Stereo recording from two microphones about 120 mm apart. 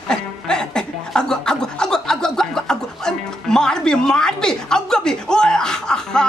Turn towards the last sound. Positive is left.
turn(degrees=5)  # may be behind; listen again after turning